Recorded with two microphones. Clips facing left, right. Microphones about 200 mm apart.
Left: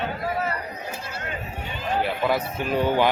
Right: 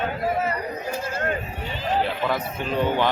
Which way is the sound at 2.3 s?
10° left (ahead or behind).